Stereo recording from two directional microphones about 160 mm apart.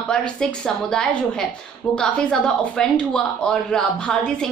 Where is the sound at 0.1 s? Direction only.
5° left (ahead or behind).